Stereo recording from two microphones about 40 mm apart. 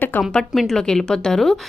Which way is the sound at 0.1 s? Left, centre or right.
Left.